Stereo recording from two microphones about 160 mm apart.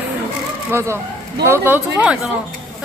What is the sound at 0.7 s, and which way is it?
Speech, 15° right (ahead or behind).